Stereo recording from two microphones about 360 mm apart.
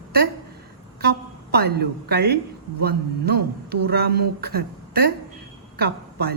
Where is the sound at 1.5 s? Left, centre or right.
Right.